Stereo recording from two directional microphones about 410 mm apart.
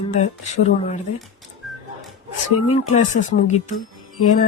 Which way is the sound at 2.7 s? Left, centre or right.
Centre.